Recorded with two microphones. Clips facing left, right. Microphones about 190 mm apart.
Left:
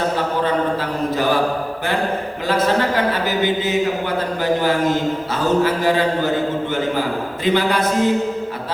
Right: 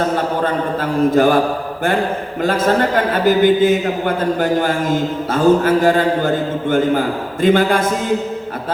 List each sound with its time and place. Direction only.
0.4 s mantra: 50° right (ahead or behind)
2.4 s a man's voice: 50° right (ahead or behind)